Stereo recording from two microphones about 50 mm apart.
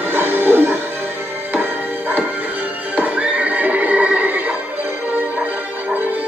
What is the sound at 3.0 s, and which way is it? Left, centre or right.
Horse, right.